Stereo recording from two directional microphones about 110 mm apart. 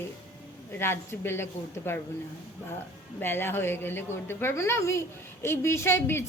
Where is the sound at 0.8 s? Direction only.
20° left (ahead or behind).